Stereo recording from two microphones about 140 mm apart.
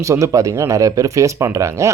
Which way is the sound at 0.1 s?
20° right (ahead or behind).